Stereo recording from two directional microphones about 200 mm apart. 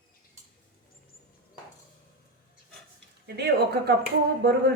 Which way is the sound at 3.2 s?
55° right (ahead or behind).